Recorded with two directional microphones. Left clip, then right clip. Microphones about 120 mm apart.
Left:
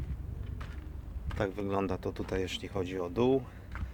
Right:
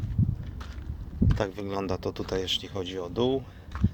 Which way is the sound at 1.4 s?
Centre (ahead or behind).